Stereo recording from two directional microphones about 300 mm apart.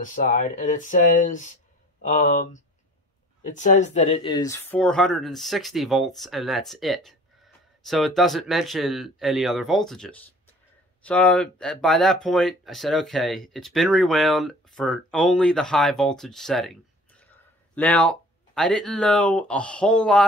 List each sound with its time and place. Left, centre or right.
0.0 s speech: left; by 16.7 s centre
17.7 s speech: centre